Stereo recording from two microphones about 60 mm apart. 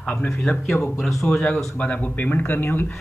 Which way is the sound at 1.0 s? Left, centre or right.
Centre.